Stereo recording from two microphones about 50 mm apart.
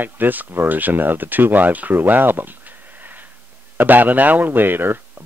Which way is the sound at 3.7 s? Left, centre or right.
Right.